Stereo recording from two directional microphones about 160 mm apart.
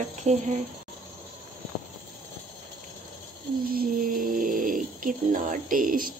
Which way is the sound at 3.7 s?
65° right (ahead or behind).